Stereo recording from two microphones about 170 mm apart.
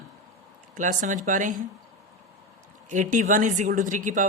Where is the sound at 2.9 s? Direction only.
45° right (ahead or behind).